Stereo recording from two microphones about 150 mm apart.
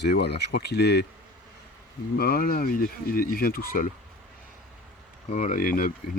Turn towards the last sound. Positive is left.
turn(degrees=70)  # may be behind; listen again after turning